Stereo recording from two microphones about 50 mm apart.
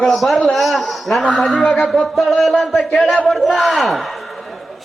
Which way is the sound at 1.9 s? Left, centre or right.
Centre.